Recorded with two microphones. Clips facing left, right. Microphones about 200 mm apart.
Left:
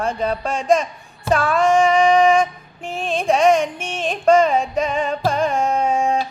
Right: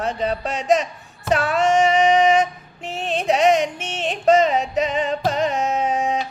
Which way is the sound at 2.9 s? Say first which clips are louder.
Left 2 dB; 20° right (ahead or behind).